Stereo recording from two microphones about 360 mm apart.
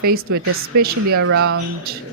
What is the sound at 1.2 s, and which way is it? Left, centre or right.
Speech, right.